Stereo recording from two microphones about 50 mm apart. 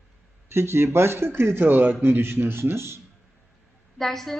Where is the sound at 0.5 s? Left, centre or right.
Right.